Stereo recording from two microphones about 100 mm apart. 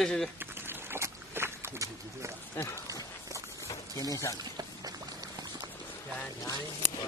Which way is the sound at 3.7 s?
35° left (ahead or behind).